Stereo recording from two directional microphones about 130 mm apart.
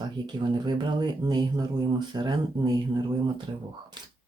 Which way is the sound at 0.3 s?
35° right (ahead or behind).